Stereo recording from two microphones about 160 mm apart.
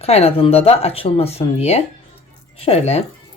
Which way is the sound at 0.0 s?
40° left (ahead or behind).